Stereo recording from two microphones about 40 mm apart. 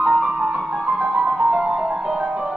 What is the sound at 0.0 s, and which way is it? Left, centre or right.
Music, centre.